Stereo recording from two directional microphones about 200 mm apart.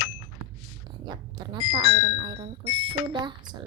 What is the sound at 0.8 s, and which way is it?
A woman's voice, 20° right (ahead or behind).